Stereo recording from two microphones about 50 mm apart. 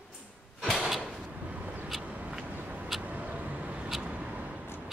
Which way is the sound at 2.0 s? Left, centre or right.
Right.